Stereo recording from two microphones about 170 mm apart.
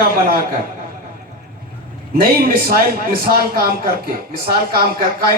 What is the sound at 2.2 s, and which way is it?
A man's voice, 60° right (ahead or behind).